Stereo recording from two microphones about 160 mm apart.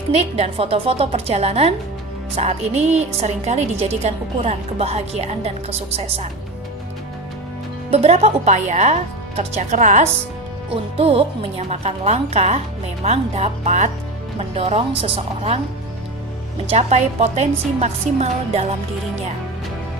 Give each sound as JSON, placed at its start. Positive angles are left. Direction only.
{"t": 0.1, "sound": "a woman's voice", "side_deg": -40}
{"t": 7.9, "sound": "a woman's voice", "side_deg": -40}
{"t": 10.9, "sound": "a woman's voice", "side_deg": -35}
{"t": 16.6, "sound": "a woman's voice", "side_deg": -45}